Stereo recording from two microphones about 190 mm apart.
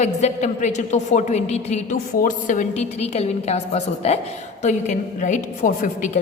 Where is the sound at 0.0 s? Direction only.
35° left (ahead or behind).